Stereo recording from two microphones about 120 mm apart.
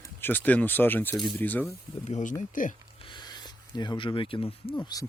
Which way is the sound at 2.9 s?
40° left (ahead or behind).